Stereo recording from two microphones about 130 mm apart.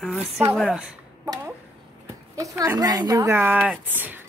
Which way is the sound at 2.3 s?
25° right (ahead or behind).